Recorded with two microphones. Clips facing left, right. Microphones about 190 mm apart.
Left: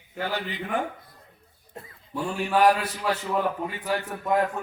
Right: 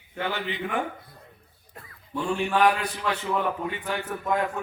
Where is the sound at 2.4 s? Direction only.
40° left (ahead or behind).